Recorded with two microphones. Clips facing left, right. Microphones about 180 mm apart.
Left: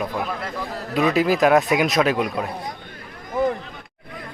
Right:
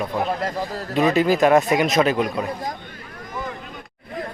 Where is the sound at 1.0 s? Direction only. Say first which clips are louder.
Right 1 dB; 5° left (ahead or behind).